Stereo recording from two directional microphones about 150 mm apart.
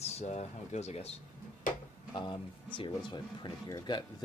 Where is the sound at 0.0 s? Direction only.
45° left (ahead or behind).